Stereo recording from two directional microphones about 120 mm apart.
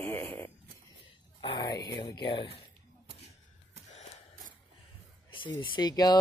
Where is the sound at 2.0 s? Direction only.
40° left (ahead or behind).